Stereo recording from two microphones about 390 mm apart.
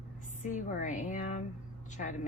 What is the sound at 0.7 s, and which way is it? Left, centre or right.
Speech, centre.